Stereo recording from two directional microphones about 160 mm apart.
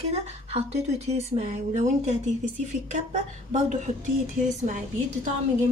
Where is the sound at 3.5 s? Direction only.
50° right (ahead or behind).